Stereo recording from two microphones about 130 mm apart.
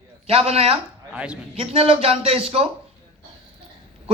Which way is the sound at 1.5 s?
50° right (ahead or behind).